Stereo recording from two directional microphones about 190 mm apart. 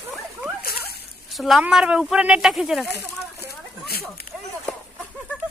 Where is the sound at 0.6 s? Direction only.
55° left (ahead or behind).